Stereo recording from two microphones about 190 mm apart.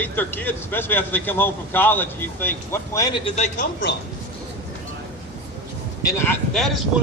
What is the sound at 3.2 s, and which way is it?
Speech, 35° left (ahead or behind).